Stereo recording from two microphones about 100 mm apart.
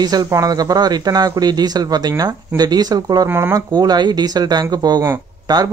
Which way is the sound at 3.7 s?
45° right (ahead or behind).